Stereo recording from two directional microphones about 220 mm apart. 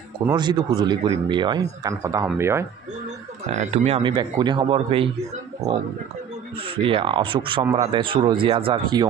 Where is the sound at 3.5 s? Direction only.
30° right (ahead or behind).